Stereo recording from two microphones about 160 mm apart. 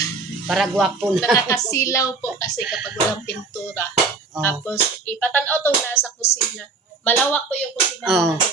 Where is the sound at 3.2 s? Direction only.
20° left (ahead or behind).